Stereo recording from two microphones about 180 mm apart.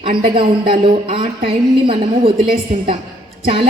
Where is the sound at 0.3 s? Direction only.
30° right (ahead or behind).